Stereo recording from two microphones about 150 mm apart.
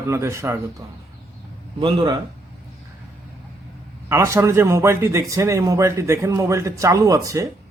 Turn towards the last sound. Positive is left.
turn(degrees=-20)  # may be behind; listen again after turning